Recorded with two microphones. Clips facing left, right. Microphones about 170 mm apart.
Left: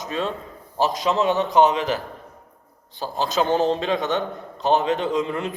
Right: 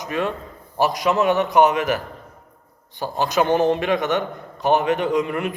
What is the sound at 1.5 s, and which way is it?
Speech, 15° right (ahead or behind).